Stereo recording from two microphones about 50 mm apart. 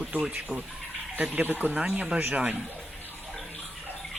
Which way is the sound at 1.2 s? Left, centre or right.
Right.